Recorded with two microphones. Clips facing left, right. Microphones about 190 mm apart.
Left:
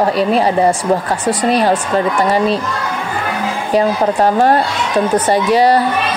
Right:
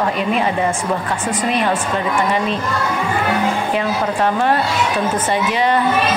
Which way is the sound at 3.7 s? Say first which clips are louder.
Left 5 dB; 35° left (ahead or behind).